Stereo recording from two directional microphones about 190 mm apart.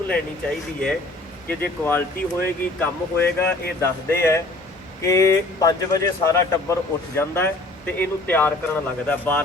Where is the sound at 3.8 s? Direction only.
15° left (ahead or behind).